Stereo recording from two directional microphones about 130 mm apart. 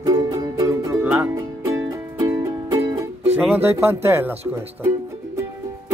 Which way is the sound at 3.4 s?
15° right (ahead or behind).